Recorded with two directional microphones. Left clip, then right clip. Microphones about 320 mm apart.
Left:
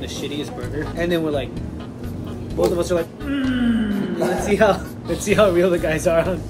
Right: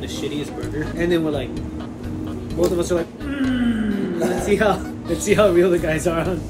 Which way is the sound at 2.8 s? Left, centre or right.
Centre.